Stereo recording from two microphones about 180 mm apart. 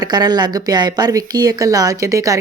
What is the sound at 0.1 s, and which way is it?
A woman's voice, 20° right (ahead or behind).